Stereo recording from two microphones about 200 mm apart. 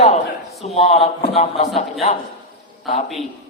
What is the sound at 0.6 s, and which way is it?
A man's voice, 30° left (ahead or behind).